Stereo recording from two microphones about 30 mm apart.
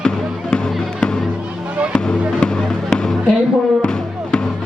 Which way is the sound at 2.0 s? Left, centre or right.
Left.